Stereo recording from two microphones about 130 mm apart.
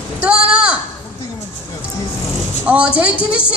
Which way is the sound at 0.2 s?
10° right (ahead or behind).